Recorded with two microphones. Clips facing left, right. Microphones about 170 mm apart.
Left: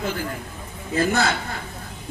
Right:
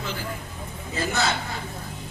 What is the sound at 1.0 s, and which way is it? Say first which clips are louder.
Speech: left 5 dB; 55° left (ahead or behind).